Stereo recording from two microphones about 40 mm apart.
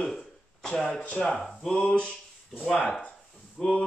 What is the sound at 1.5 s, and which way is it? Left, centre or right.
Speech, centre.